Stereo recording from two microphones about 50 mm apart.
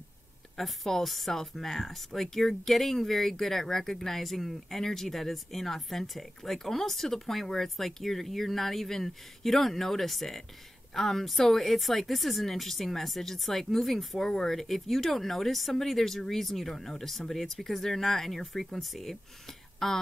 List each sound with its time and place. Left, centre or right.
0.6 s speech: centre